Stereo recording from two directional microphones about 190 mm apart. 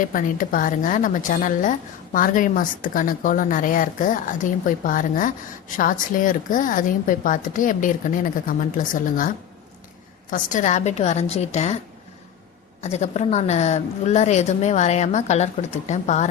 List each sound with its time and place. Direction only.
0.0 s speech: 45° left (ahead or behind)
10.3 s a woman's voice: 40° left (ahead or behind)
12.8 s a woman's voice: 35° left (ahead or behind)